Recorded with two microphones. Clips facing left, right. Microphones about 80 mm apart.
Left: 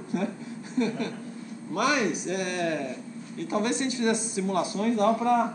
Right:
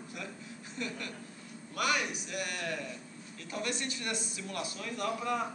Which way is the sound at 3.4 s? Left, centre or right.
Left.